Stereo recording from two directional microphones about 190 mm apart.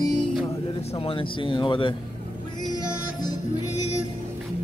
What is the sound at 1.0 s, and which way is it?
Speech, 30° left (ahead or behind).